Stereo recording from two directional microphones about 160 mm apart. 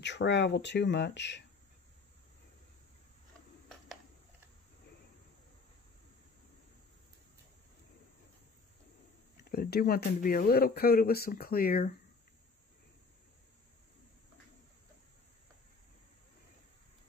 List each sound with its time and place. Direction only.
0.0 s speech: 90° left
9.5 s speech: 75° left (ahead or behind)